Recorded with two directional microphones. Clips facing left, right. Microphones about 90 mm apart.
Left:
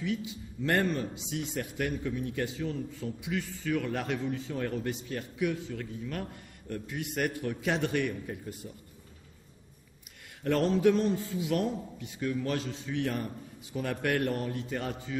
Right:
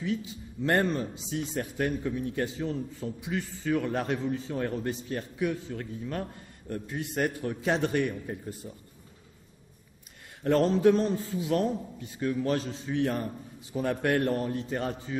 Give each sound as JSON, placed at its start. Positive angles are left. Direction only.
{"t": 0.0, "sound": "a man's voice", "side_deg": -35}
{"t": 10.4, "sound": "a man's voice", "side_deg": -30}